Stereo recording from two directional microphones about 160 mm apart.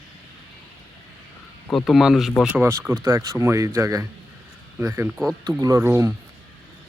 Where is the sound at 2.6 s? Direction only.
15° right (ahead or behind).